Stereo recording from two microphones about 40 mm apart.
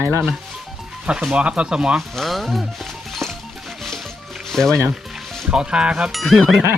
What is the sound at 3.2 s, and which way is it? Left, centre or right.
Music, centre.